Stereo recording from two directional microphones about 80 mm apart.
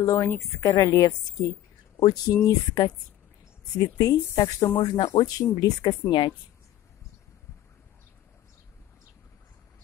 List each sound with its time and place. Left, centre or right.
0.0 s a woman's voice: left
4.8 s speech: left